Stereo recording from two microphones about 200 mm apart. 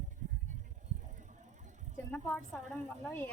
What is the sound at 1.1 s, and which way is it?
Vehicle, 40° right (ahead or behind).